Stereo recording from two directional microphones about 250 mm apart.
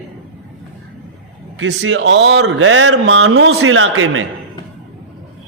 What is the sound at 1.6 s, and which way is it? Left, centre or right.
Speech, right.